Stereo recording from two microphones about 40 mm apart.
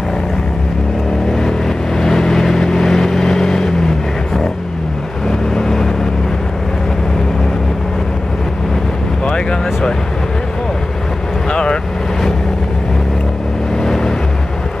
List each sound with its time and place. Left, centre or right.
2.0 s vehicle: centre
5.3 s vehicle: centre
11.5 s vehicle: left
13.8 s vehicle: centre